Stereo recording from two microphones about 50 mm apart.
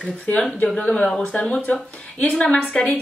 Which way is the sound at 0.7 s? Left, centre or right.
Left.